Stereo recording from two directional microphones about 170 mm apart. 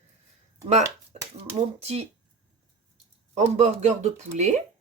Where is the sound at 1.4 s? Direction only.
40° right (ahead or behind).